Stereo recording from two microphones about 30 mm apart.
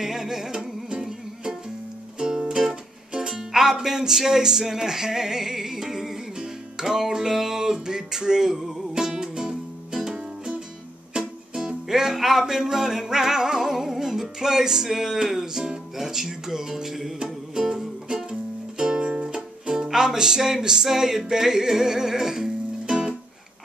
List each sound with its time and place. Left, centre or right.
0.0 s music: centre
3.3 s music: centre
11.1 s music: right
17.2 s music: right
18.8 s music: right
19.7 s music: centre